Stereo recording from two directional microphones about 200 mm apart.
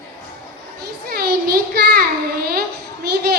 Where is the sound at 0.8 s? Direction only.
50° right (ahead or behind).